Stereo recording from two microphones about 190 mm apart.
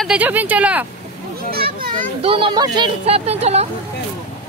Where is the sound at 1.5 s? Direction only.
50° right (ahead or behind).